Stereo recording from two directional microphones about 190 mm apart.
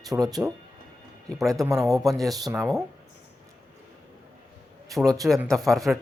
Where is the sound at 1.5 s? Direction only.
15° right (ahead or behind).